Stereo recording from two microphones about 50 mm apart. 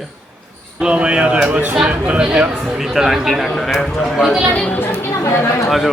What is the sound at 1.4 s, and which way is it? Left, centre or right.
Speech, right.